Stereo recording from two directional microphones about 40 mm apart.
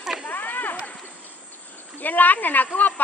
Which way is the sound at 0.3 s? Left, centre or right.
Left.